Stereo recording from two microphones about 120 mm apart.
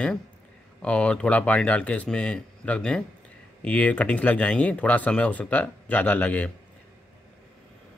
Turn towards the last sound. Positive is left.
turn(degrees=15)  # may be behind; listen again after turning